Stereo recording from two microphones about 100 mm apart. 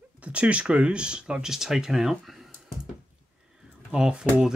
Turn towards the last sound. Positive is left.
turn(degrees=-10)  # may be behind; listen again after turning